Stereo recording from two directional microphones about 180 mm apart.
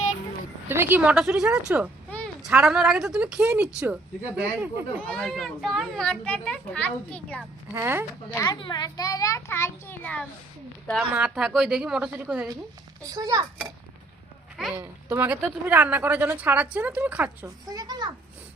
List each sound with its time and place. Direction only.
0.7 s a woman's voice: 10° right (ahead or behind)
2.0 s a sound: 10° left (ahead or behind)
2.4 s a child's voice: 5° right (ahead or behind)
5.0 s a child's voice: 5° left (ahead or behind)
7.8 s a woman's voice: 10° right (ahead or behind)
8.4 s a child's voice: 25° left (ahead or behind); by 10.2 s 10° left (ahead or behind)
11.1 s a child's voice: 5° right (ahead or behind)
13.1 s a child's voice: 20° right (ahead or behind)
14.8 s a woman's voice: 10° right (ahead or behind)
17.7 s a child's voice: 20° right (ahead or behind)